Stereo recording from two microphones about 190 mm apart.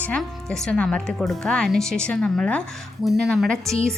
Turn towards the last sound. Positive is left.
turn(degrees=0)  # may be behind; listen again after turning